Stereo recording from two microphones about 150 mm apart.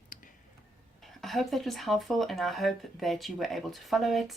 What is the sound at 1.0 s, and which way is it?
Speech, centre (ahead or behind).